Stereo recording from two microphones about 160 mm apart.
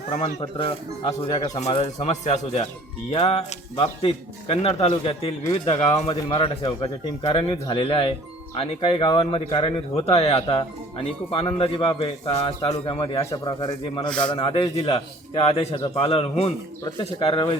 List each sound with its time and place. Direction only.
0.2 s speech: 35° left (ahead or behind)
14.1 s a man's voice: 5° left (ahead or behind)
14.3 s speech: 35° left (ahead or behind)